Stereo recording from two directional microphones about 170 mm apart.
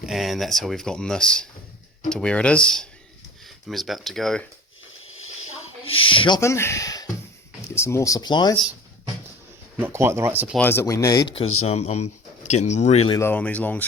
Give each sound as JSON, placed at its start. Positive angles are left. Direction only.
{"t": 0.0, "sound": "speech", "side_deg": 0}
{"t": 5.8, "sound": "speech", "side_deg": 30}
{"t": 6.4, "sound": "speech", "side_deg": 15}
{"t": 9.7, "sound": "speech", "side_deg": -15}
{"t": 10.6, "sound": "speech", "side_deg": 15}
{"t": 11.3, "sound": "speech", "side_deg": 40}
{"t": 13.1, "sound": "speech", "side_deg": 10}